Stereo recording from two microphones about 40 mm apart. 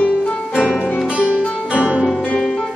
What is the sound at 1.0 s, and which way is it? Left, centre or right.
Music, right.